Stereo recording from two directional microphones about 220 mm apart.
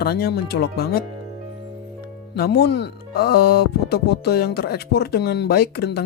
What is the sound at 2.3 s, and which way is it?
Speech, 45° left (ahead or behind).